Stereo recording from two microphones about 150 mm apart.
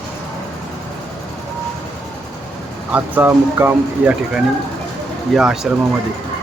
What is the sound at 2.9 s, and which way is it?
Speech, 15° right (ahead or behind).